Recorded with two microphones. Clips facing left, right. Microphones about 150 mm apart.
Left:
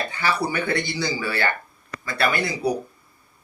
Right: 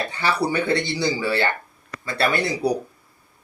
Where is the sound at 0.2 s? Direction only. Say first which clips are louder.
Right 2 dB; 30° right (ahead or behind).